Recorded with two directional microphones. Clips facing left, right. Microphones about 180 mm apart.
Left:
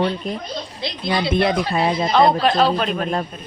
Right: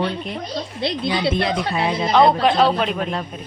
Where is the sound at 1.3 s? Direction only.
60° left (ahead or behind).